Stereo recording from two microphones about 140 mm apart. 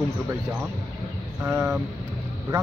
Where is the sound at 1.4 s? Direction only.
20° right (ahead or behind).